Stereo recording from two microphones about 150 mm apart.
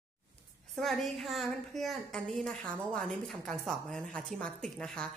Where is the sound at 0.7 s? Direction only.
Centre (ahead or behind).